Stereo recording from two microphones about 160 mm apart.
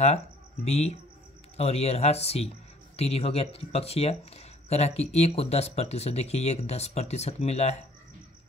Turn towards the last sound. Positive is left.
turn(degrees=40)  # may be behind; listen again after turning